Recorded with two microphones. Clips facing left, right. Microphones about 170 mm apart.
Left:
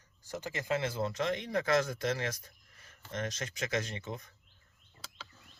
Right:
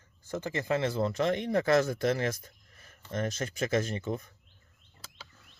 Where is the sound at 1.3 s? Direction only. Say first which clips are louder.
Right 4 dB; 25° right (ahead or behind).